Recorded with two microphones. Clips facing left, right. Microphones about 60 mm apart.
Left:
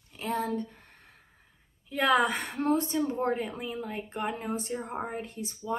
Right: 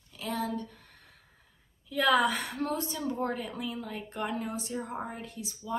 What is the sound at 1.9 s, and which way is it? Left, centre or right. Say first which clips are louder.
A woman's voice: left 1 dB; left.